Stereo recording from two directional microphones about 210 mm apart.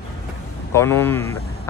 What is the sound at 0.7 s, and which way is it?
Speech, 10° left (ahead or behind).